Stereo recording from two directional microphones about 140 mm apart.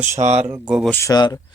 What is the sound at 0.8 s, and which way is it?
Speech, 15° left (ahead or behind).